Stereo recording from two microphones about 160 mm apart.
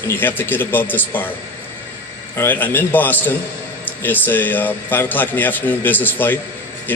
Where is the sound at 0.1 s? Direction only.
15° left (ahead or behind).